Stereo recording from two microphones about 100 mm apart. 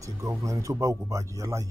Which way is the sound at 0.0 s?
30° right (ahead or behind).